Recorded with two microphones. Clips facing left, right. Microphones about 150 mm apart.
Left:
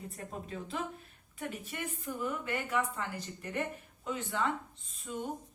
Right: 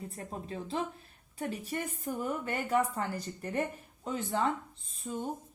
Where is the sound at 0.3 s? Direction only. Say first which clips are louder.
Right 2 dB; 30° right (ahead or behind).